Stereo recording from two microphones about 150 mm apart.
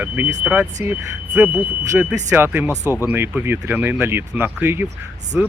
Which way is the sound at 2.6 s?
15° left (ahead or behind).